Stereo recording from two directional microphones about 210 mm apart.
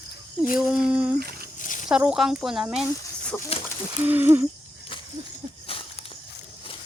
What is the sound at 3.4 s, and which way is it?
Speech, 30° left (ahead or behind).